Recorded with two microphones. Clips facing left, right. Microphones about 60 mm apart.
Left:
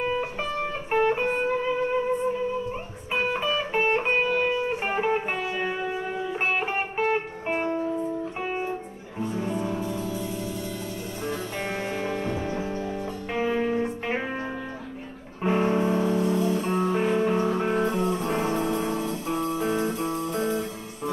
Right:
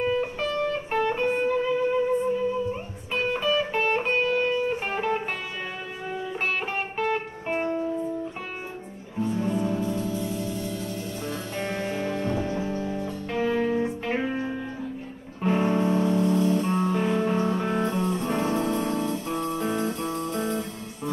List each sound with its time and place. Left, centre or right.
0.0 s music: centre
9.2 s music: centre
13.3 s music: centre
15.4 s music: centre